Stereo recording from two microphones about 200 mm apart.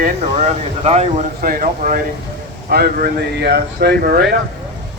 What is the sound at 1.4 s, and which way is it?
Speech, 45° right (ahead or behind).